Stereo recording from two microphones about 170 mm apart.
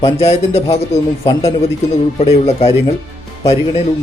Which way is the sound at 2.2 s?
40° left (ahead or behind).